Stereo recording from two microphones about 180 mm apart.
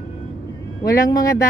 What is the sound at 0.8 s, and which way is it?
Speech, 20° left (ahead or behind).